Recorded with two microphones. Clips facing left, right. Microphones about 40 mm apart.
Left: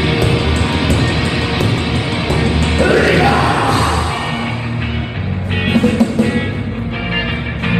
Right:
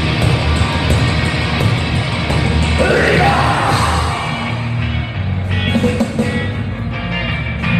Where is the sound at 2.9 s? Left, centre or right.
Right.